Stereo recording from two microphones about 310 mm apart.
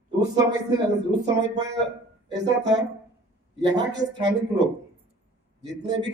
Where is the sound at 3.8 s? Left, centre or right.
Right.